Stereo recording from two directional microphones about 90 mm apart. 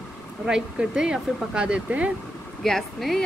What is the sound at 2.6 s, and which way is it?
Speech, 5° left (ahead or behind).